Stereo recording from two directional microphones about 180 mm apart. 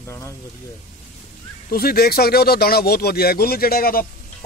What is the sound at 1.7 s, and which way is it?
Speech, 55° left (ahead or behind).